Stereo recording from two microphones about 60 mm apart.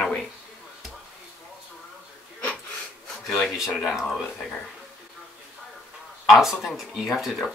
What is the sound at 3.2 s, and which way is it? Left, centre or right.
Speech, centre.